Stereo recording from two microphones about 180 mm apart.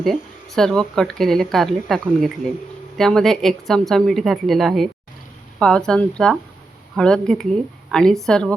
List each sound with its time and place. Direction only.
0.0 s speech: centre (ahead or behind)